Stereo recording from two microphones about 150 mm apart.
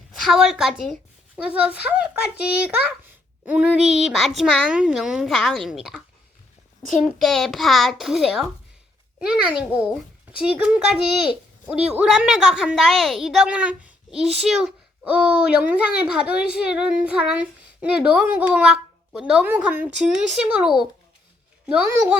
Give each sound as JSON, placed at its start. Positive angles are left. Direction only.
{"t": 0.1, "sound": "a woman's voice", "side_deg": 0}
{"t": 2.3, "sound": "a child's voice", "side_deg": 90}
{"t": 2.6, "sound": "a child's voice", "side_deg": -10}